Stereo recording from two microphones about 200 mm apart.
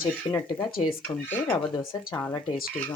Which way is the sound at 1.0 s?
10° left (ahead or behind).